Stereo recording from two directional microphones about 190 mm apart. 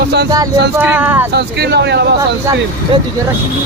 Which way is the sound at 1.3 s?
60° right (ahead or behind).